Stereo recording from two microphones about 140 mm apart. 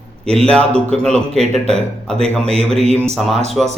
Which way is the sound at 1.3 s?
50° right (ahead or behind).